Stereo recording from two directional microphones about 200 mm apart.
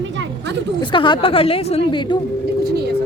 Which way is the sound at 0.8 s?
25° left (ahead or behind).